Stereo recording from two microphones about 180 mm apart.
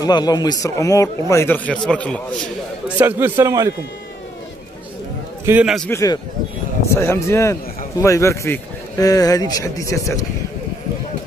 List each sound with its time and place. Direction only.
0.0 s a man's voice: 20° left (ahead or behind); by 2.1 s 5° left (ahead or behind)
3.0 s speech: 10° right (ahead or behind)
5.4 s a man's voice: 10° right (ahead or behind)
5.9 s speech: 15° left (ahead or behind)